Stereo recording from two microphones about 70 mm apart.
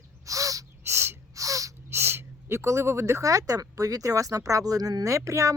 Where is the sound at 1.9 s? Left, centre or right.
Right.